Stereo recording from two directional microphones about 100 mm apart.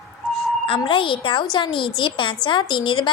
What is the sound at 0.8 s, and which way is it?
A woman's voice, 60° left (ahead or behind).